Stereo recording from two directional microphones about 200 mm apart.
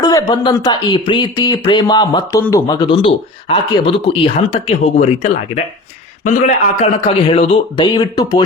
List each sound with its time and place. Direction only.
0.0 s a man's voice: 20° left (ahead or behind)